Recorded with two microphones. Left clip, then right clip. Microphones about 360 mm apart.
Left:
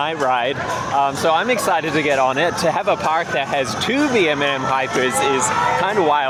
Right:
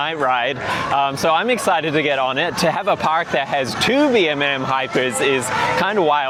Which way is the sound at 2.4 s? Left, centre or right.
Right.